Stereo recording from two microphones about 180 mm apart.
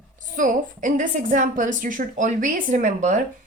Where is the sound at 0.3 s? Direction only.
45° right (ahead or behind).